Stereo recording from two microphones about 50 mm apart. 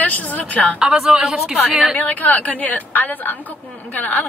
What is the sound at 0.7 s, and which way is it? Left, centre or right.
Speech, centre.